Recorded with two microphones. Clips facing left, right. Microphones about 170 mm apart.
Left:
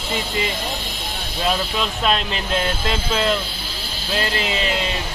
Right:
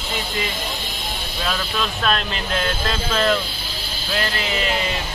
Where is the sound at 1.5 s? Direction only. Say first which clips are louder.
Left 3 dB; 20° left (ahead or behind).